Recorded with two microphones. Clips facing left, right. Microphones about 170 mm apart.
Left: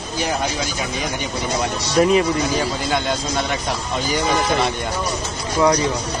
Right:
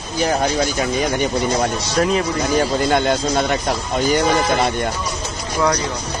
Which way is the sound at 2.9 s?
50° right (ahead or behind).